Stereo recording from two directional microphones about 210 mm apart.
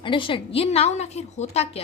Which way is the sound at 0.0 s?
25° left (ahead or behind).